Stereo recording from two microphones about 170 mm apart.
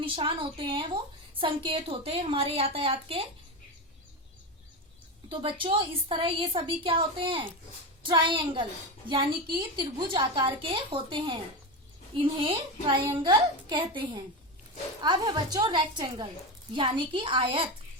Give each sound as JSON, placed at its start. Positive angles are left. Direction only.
{"t": 0.0, "sound": "a woman's voice", "side_deg": -30}
{"t": 5.3, "sound": "a woman's voice", "side_deg": -30}